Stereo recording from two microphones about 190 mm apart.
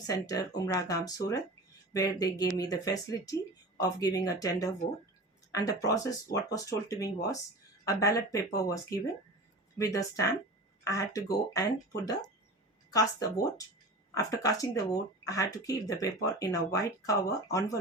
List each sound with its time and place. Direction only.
0.1 s speech: 20° left (ahead or behind)
12.9 s speech: 20° left (ahead or behind)